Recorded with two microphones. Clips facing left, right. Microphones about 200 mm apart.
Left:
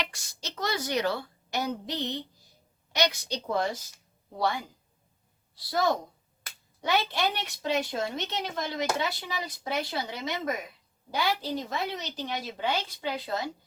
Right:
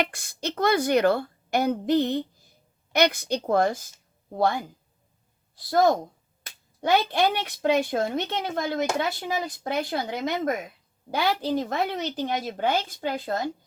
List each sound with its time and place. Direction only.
0.0 s a woman's voice: 55° right (ahead or behind)